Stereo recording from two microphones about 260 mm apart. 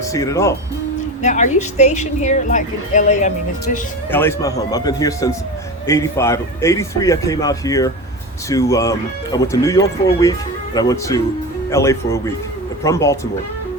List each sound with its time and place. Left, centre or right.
0.1 s a man's voice: centre
1.2 s a woman's voice: left
4.1 s a man's voice: centre